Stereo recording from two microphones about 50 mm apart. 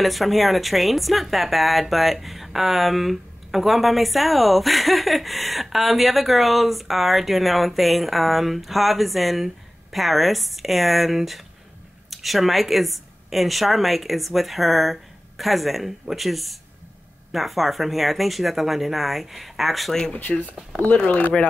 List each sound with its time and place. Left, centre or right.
0.0 s speech: centre
20.1 s speech: left